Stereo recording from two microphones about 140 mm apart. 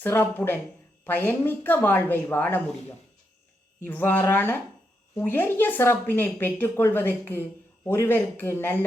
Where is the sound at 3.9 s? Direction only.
15° left (ahead or behind).